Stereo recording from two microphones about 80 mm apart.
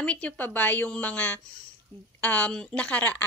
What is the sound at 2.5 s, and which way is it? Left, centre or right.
Speech, centre.